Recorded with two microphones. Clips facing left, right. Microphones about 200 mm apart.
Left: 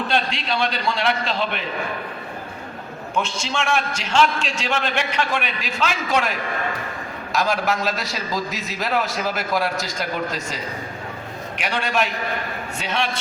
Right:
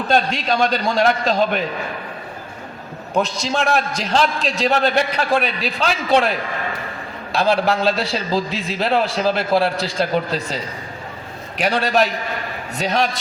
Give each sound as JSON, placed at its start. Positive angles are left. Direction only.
{"t": 0.1, "sound": "a man's voice", "side_deg": -45}
{"t": 3.2, "sound": "a man's voice", "side_deg": -35}
{"t": 7.3, "sound": "a man's voice", "side_deg": -30}